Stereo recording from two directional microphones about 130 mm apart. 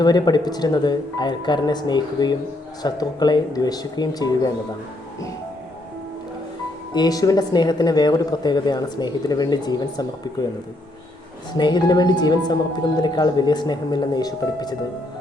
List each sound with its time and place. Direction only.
0.0 s speech: 30° left (ahead or behind)
6.9 s speech: 30° left (ahead or behind)
11.5 s speech: 35° left (ahead or behind)